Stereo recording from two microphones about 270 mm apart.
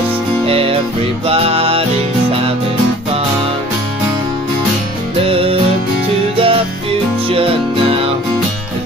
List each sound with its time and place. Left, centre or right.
0.5 s music: right
5.2 s music: right